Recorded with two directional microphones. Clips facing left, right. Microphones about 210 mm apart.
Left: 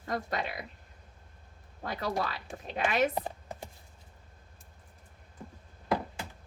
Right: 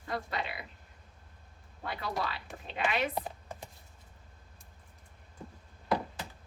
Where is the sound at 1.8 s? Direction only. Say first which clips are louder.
Left 3 dB; 40° left (ahead or behind).